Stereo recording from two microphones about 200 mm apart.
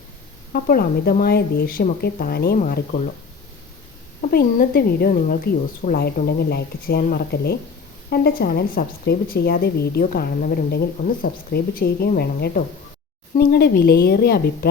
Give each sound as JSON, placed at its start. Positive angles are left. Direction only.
{"t": 0.5, "sound": "speech", "side_deg": 45}
{"t": 4.2, "sound": "speech", "side_deg": 45}